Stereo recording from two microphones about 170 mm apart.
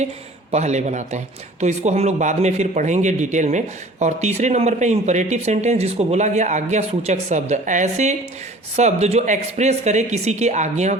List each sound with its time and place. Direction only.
0.5 s speech: 40° right (ahead or behind)